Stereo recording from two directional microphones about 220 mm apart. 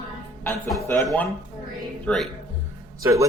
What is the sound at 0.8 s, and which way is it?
Speech, centre (ahead or behind).